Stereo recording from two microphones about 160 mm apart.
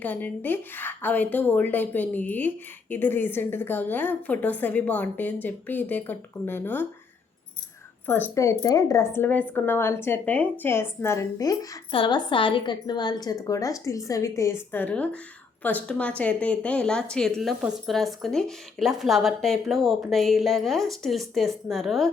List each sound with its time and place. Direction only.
0.0 s a woman's voice: 10° left (ahead or behind)
8.0 s a woman's voice: 10° left (ahead or behind)
11.9 s a woman's voice: 30° left (ahead or behind); by 22.1 s centre (ahead or behind)